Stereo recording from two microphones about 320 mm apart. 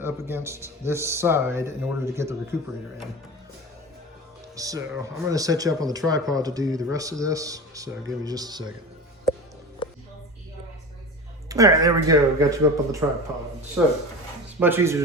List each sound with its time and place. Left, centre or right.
0.0 s speech: centre
4.5 s speech: centre
9.8 s music: centre
11.4 s speech: centre